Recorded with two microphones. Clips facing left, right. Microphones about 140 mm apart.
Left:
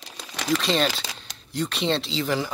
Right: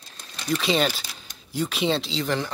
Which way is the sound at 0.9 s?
90° left.